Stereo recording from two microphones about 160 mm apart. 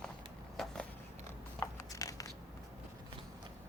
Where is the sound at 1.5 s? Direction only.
20° left (ahead or behind).